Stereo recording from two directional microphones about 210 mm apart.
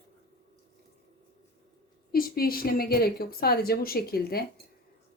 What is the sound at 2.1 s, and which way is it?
A woman's voice, 45° left (ahead or behind).